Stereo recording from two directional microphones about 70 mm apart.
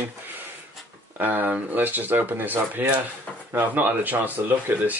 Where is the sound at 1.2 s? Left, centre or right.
Right.